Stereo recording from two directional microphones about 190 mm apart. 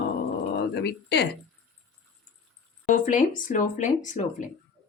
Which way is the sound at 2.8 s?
40° left (ahead or behind).